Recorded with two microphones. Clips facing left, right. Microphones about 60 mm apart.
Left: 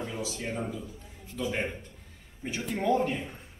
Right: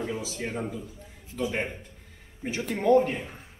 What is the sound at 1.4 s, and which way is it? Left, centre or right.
Speech, centre.